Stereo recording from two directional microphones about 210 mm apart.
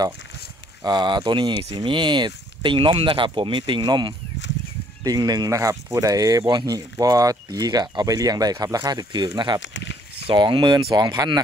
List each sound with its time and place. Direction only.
0.8 s speech: 20° right (ahead or behind)
9.6 s speech: 60° left (ahead or behind)
10.2 s speech: 25° right (ahead or behind)